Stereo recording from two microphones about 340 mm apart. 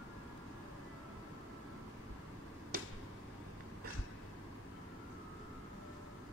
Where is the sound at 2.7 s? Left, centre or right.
Right.